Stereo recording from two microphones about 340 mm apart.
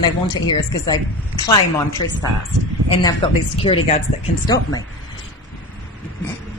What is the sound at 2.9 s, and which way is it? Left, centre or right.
Speech, centre.